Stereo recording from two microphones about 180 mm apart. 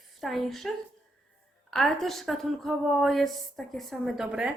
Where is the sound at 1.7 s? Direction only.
Centre (ahead or behind).